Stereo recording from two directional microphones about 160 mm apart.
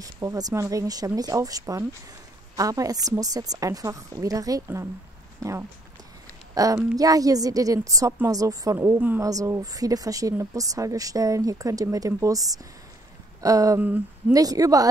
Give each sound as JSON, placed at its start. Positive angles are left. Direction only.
{"t": 0.0, "sound": "a woman's voice", "side_deg": -20}
{"t": 13.4, "sound": "a sound", "side_deg": -20}
{"t": 14.3, "sound": "speech", "side_deg": -20}